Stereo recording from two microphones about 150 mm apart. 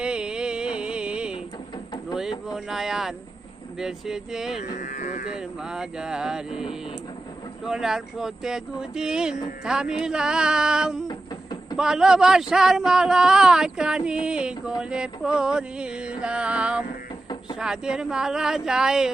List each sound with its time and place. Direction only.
0.0 s music: 5° right (ahead or behind)
2.5 s speech: centre (ahead or behind)
4.6 s speech: 60° left (ahead or behind)
5.3 s speech: 5° right (ahead or behind)